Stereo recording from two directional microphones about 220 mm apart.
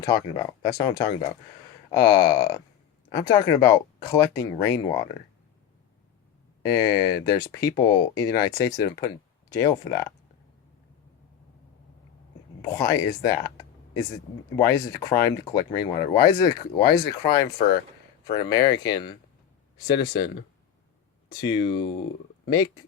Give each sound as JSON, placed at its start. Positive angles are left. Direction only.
{"t": 0.0, "sound": "speech", "side_deg": 15}
{"t": 6.6, "sound": "speech", "side_deg": 15}
{"t": 12.6, "sound": "speech", "side_deg": 15}